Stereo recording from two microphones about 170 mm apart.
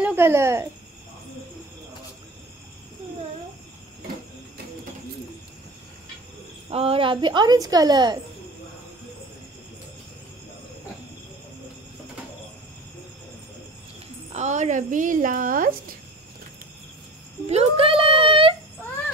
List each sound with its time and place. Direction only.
0.0 s speech: 15° right (ahead or behind)
6.7 s a woman's voice: 35° right (ahead or behind)
14.3 s a woman's voice: 45° right (ahead or behind)
17.5 s a sound: 35° right (ahead or behind)